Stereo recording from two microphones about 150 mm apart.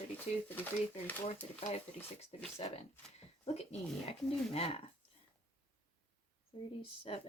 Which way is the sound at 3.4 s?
45° left (ahead or behind).